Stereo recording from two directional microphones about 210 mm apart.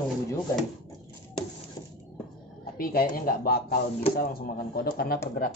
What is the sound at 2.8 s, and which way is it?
Speech, 45° left (ahead or behind).